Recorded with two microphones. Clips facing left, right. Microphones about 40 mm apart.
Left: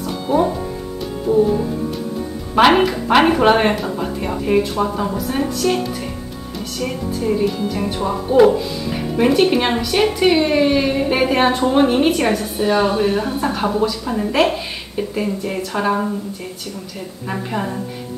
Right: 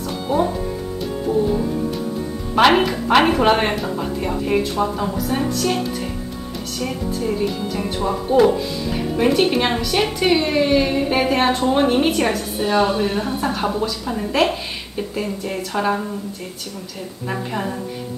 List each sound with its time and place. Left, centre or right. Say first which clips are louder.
0.3 s speech: left 2 dB; centre
2.5 s speech: left 2 dB; centre
6.8 s speech: left 1 dB; centre
17.3 s speech: left 1 dB; centre